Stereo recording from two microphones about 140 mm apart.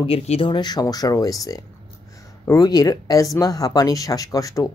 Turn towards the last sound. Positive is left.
turn(degrees=25)  # may be behind; listen again after turning